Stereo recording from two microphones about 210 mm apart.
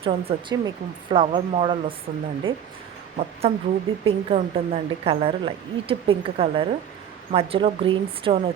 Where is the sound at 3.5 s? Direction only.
30° right (ahead or behind).